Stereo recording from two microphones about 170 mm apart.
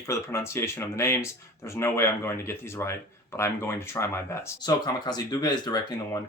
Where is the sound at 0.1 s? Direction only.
15° left (ahead or behind).